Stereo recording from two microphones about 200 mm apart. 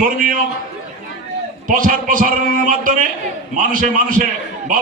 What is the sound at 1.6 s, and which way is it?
A man's voice, 45° right (ahead or behind).